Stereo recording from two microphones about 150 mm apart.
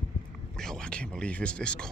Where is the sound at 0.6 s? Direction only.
5° left (ahead or behind).